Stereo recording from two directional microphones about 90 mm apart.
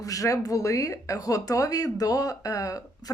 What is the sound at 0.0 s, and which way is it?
Speech, 40° left (ahead or behind).